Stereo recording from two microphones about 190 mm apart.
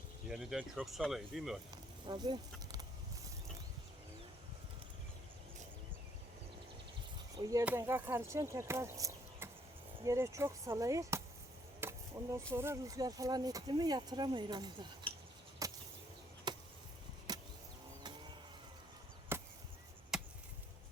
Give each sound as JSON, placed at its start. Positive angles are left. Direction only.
{"t": 0.3, "sound": "speech", "side_deg": -5}
{"t": 2.0, "sound": "speech", "side_deg": -25}
{"t": 7.3, "sound": "speech", "side_deg": -20}
{"t": 11.8, "sound": "chop", "side_deg": -15}
{"t": 12.5, "sound": "speech", "side_deg": -15}
{"t": 15.6, "sound": "a sound", "side_deg": -20}
{"t": 16.5, "sound": "chop", "side_deg": -20}
{"t": 17.3, "sound": "vehicle", "side_deg": -20}
{"t": 19.3, "sound": "chop", "side_deg": -10}